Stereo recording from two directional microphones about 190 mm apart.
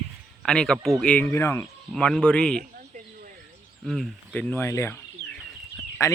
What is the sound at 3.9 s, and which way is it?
A man's voice, 5° left (ahead or behind).